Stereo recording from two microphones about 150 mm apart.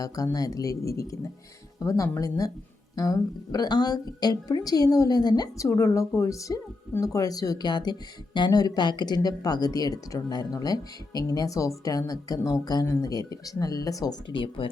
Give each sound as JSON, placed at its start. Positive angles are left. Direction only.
{"t": 0.0, "sound": "a woman's voice", "side_deg": 25}